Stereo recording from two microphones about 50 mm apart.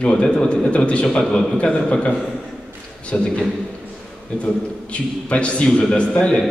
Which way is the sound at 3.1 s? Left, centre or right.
Centre.